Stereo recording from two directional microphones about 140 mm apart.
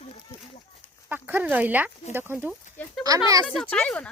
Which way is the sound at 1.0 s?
15° right (ahead or behind).